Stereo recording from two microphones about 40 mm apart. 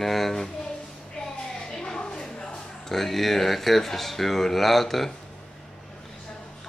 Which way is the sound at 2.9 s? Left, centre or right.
Centre.